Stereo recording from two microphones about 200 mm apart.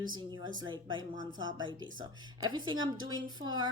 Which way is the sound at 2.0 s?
80° right.